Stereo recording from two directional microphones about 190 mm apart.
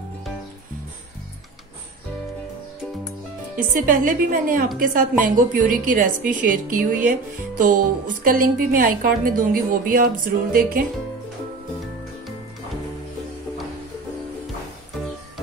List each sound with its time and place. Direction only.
3.7 s a woman's voice: 45° right (ahead or behind)